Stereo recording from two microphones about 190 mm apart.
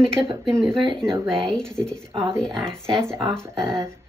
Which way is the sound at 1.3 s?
Centre (ahead or behind).